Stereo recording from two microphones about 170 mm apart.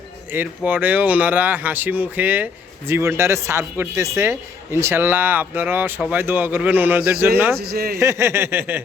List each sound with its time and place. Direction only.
0.3 s speech: 10° right (ahead or behind)
7.6 s speech: 65° right (ahead or behind)
7.9 s speech: 15° right (ahead or behind)